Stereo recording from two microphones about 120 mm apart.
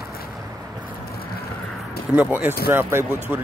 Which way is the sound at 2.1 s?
15° right (ahead or behind).